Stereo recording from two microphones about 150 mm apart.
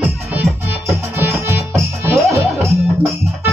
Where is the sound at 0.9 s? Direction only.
15° right (ahead or behind).